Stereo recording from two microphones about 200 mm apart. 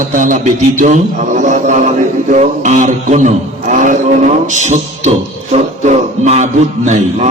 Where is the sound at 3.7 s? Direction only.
40° right (ahead or behind).